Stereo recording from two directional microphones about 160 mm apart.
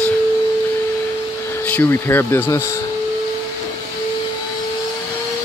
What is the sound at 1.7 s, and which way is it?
Speech, 15° left (ahead or behind).